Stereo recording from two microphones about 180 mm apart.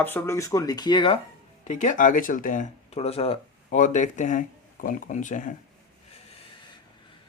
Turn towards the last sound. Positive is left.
turn(degrees=45)  # may be behind; listen again after turning